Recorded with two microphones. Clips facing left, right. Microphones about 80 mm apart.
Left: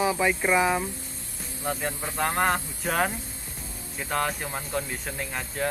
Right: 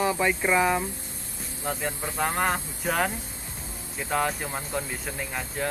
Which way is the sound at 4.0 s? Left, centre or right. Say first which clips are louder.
Right 1 dB; centre.